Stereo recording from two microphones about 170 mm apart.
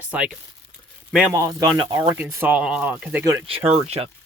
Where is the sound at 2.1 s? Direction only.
10° right (ahead or behind).